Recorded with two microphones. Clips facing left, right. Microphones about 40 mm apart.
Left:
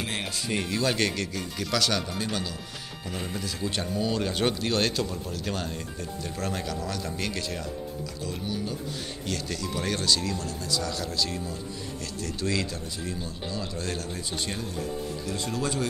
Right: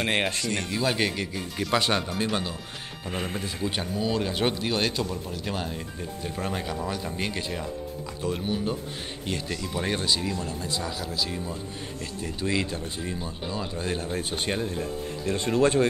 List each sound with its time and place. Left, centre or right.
0.0 s speech: right
0.7 s speech: centre
1.7 s speech: right
3.1 s speech: right
3.6 s speech: centre
8.2 s speech: right
9.2 s speech: right
11.0 s speech: centre; by 15.9 s right